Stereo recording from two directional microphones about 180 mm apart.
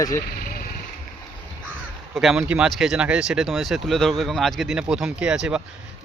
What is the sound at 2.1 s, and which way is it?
Speech, centre (ahead or behind).